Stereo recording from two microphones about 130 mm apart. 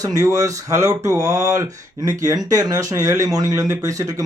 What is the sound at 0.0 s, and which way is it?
Speech, 25° right (ahead or behind).